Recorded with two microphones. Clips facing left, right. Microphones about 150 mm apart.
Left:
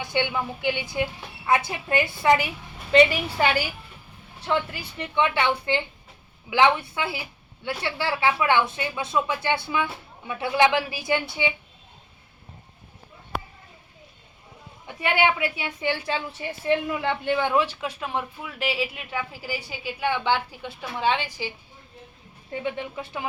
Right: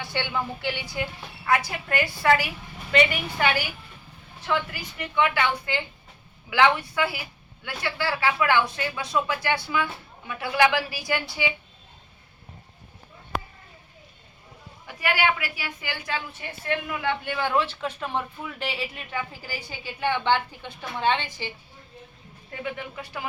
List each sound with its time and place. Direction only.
0.0 s a woman's voice: 15° left (ahead or behind)
4.4 s speech: 30° left (ahead or behind)
14.8 s a woman's voice: 25° left (ahead or behind)
22.6 s speech: 25° left (ahead or behind)